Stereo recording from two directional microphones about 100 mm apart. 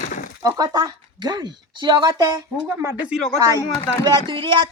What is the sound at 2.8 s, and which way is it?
Speech, 20° right (ahead or behind).